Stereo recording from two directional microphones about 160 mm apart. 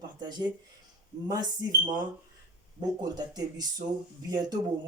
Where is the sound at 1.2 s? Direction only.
25° right (ahead or behind).